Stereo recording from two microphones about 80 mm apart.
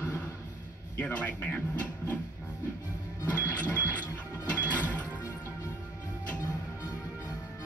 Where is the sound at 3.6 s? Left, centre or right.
Centre.